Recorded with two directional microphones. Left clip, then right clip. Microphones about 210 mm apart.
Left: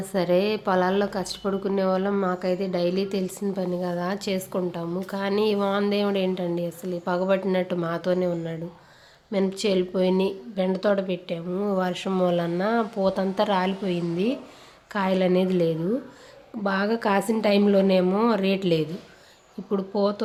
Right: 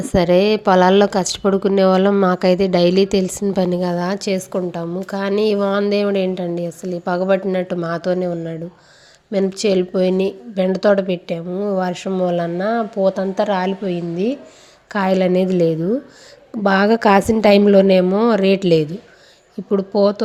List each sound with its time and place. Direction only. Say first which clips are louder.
0.1 s a woman's voice: right 9 dB; 30° right (ahead or behind)